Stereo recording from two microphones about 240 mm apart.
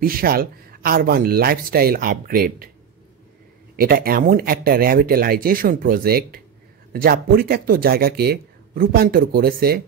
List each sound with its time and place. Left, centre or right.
0.0 s speech: right
3.7 s speech: right